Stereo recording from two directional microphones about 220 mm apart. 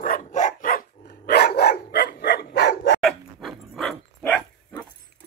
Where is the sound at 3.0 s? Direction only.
Centre (ahead or behind).